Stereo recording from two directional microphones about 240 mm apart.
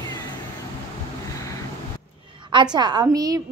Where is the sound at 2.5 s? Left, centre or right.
Centre.